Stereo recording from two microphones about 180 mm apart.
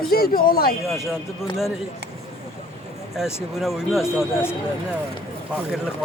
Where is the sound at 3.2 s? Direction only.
Centre (ahead or behind).